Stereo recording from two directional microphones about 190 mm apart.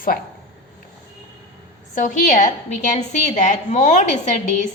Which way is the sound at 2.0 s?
45° left (ahead or behind).